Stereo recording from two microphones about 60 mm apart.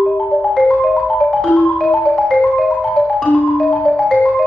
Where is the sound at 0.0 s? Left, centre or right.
Centre.